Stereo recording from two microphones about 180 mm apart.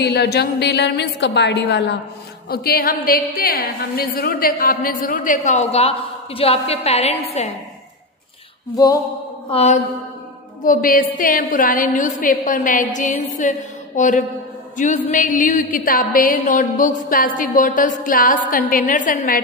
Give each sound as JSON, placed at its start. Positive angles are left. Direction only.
{"t": 0.0, "sound": "a woman's voice", "side_deg": 65}
{"t": 2.5, "sound": "a woman's voice", "side_deg": 55}
{"t": 9.5, "sound": "a woman's voice", "side_deg": 35}
{"t": 10.6, "sound": "a woman's voice", "side_deg": 50}